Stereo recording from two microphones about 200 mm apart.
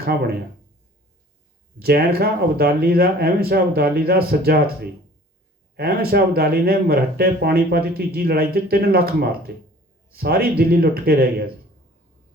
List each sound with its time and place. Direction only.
1.8 s speech: 50° right (ahead or behind)